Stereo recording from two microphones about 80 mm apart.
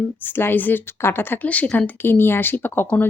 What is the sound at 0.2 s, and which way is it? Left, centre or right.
A woman's voice, left.